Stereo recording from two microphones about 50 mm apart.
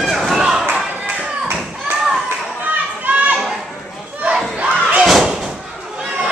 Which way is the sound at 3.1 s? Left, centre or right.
Right.